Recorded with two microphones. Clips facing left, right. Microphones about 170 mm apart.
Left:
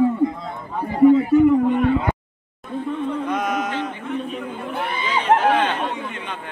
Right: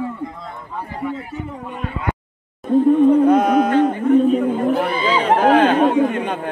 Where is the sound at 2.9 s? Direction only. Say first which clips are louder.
Right 12 dB; 45° right (ahead or behind).